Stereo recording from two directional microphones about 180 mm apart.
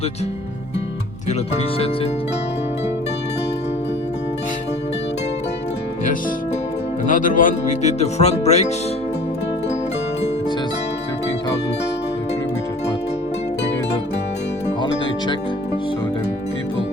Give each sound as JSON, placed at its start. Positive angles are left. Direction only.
{"t": 7.1, "sound": "speech", "side_deg": 50}